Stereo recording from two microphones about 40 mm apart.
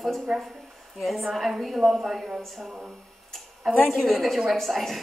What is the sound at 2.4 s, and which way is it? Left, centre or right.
A woman's voice, centre.